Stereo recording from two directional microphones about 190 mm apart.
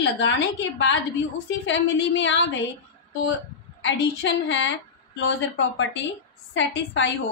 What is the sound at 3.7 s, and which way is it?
A woman's voice, 75° left (ahead or behind).